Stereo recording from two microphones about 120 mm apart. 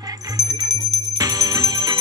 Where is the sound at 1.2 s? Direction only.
30° right (ahead or behind).